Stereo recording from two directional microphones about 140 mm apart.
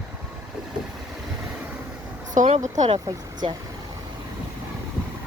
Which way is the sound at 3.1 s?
30° right (ahead or behind).